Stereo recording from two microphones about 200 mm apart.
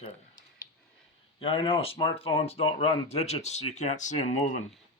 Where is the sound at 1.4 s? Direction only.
30° left (ahead or behind).